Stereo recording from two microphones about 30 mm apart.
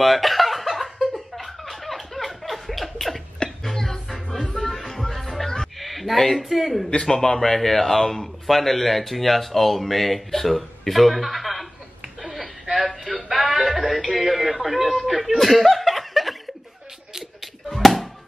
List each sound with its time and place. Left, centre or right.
0.0 s chuckle: centre
1.1 s a sound: centre
3.6 s music: centre
5.8 s speech: centre
7.0 s a man's voice: centre
7.5 s speech: centre
12.7 s music: centre
13.3 s music: centre
13.7 s a man's voice: centre
17.7 s music: centre